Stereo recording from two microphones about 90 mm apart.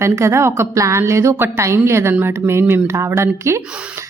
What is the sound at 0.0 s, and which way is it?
A woman's voice, 30° right (ahead or behind).